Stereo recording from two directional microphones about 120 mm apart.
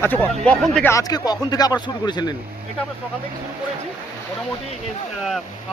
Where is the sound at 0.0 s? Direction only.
15° left (ahead or behind).